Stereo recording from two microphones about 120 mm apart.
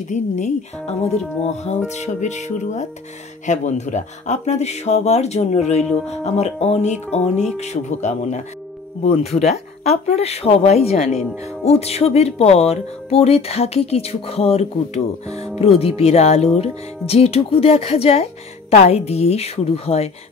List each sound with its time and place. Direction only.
0.1 s speech: 75° left (ahead or behind)
9.0 s speech: 60° left (ahead or behind)